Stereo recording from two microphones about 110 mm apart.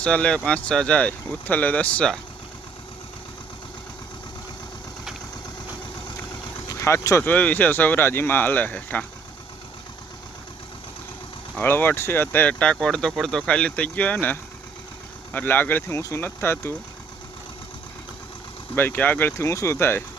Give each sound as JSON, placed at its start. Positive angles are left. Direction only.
{"t": 0.0, "sound": "speech", "side_deg": 10}
{"t": 6.7, "sound": "speech", "side_deg": 25}
{"t": 7.3, "sound": "speech", "side_deg": 15}
{"t": 11.6, "sound": "speech", "side_deg": 20}
{"t": 18.8, "sound": "speech", "side_deg": 15}